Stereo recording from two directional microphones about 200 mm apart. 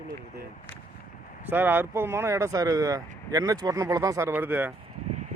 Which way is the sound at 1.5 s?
10° right (ahead or behind).